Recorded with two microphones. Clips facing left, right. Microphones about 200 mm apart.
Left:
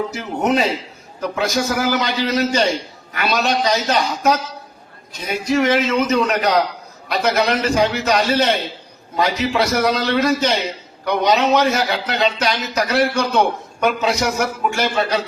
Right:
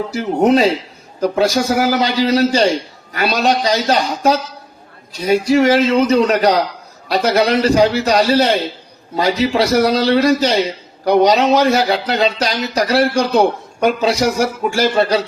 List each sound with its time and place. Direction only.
0.1 s speech: 30° right (ahead or behind)